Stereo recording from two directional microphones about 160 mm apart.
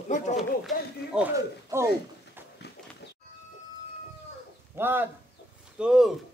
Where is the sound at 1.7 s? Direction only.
15° right (ahead or behind).